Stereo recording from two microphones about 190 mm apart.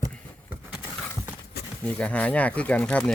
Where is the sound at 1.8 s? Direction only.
5° left (ahead or behind).